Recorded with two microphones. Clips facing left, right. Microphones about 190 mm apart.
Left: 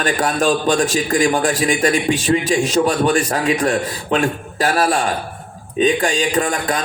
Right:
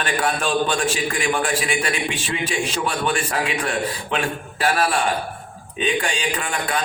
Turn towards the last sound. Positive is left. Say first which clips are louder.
# left 6 dB
turn(degrees=40)  # may be behind; listen again after turning